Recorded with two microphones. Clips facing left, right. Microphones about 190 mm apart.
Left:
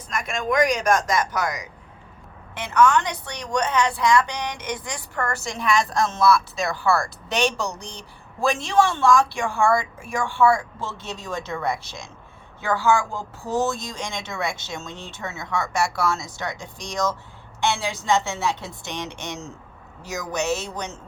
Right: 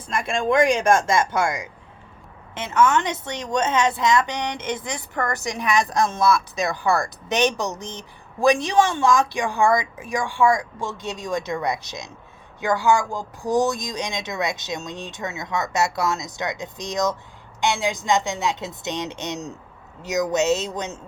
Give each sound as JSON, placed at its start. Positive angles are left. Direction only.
{"t": 0.1, "sound": "a woman's voice", "side_deg": -30}